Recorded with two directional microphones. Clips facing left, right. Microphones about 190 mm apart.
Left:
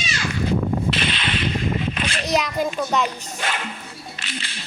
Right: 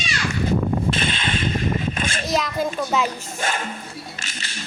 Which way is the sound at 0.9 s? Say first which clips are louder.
Right 1 dB; 50° right (ahead or behind).